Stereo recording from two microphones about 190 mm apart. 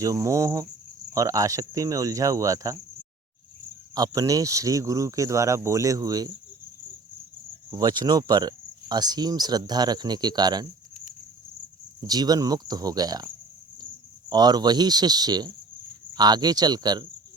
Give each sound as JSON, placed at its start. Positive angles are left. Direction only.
{"t": 0.0, "sound": "speech", "side_deg": -15}
{"t": 3.9, "sound": "speech", "side_deg": -20}
{"t": 7.7, "sound": "speech", "side_deg": -20}
{"t": 11.9, "sound": "speech", "side_deg": -20}